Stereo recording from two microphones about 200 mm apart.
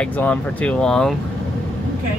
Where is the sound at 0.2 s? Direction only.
5° left (ahead or behind).